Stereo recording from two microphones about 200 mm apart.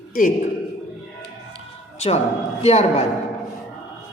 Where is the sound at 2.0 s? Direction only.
30° left (ahead or behind).